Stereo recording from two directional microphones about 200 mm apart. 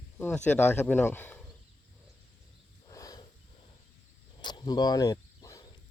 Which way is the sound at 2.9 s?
15° left (ahead or behind).